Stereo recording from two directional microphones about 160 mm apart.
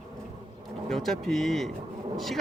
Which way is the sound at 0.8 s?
Centre (ahead or behind).